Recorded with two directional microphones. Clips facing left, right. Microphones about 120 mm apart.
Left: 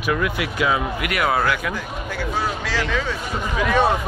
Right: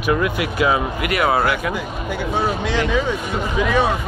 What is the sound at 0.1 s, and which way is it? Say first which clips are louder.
Speech: right 3 dB; 30° right (ahead or behind).